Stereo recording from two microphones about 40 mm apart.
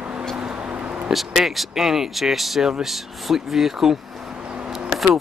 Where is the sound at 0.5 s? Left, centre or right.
Right.